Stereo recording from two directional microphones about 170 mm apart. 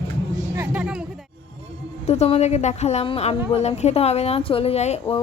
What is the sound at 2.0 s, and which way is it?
A woman's voice, 40° left (ahead or behind).